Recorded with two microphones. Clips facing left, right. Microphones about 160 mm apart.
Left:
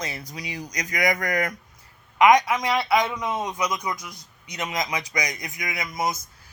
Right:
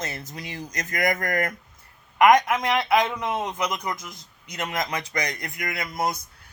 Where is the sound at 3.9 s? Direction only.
25° right (ahead or behind).